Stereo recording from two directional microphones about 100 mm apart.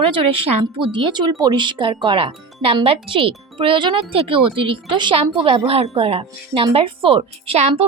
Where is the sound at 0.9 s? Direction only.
45° right (ahead or behind).